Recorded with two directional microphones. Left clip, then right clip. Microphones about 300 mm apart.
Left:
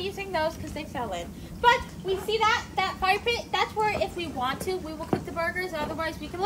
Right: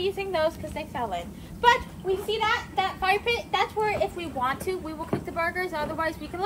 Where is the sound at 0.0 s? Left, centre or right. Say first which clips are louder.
Right 3 dB; right.